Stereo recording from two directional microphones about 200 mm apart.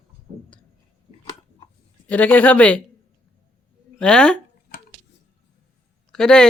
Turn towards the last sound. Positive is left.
turn(degrees=5)  # may be behind; listen again after turning